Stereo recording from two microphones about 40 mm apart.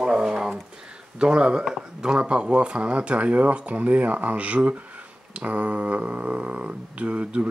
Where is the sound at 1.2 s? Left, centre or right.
Right.